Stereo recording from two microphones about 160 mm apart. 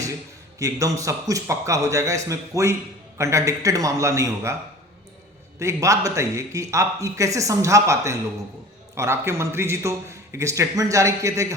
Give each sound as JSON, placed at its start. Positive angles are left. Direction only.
{"t": 0.6, "sound": "a man's voice", "side_deg": -20}
{"t": 5.5, "sound": "a man's voice", "side_deg": -20}